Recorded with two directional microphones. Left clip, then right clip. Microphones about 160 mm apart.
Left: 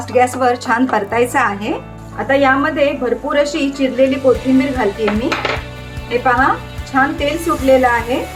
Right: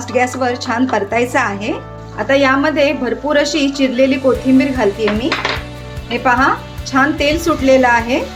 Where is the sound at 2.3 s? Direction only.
25° right (ahead or behind).